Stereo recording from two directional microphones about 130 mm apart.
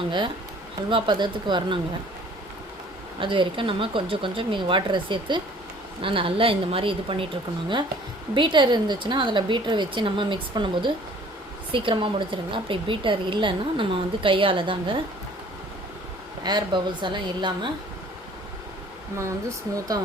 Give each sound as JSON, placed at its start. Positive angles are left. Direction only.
{"t": 0.9, "sound": "a woman's voice", "side_deg": -40}
{"t": 3.2, "sound": "a woman's voice", "side_deg": -40}
{"t": 8.4, "sound": "a woman's voice", "side_deg": -35}
{"t": 16.4, "sound": "a woman's voice", "side_deg": -35}
{"t": 19.1, "sound": "speech", "side_deg": -25}